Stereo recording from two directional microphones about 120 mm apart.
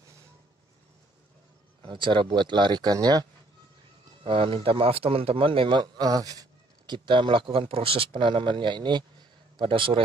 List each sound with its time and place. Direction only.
1.8 s speech: 45° right (ahead or behind)
4.2 s speech: 45° right (ahead or behind); by 6.4 s 30° right (ahead or behind)
6.9 s speech: 45° right (ahead or behind)